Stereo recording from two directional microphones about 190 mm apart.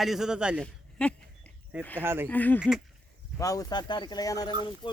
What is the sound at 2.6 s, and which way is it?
Speech, 5° right (ahead or behind).